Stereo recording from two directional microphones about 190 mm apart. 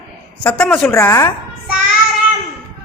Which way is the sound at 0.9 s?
15° left (ahead or behind).